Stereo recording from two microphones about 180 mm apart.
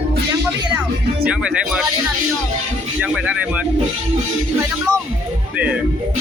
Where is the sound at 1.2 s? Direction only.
5° right (ahead or behind).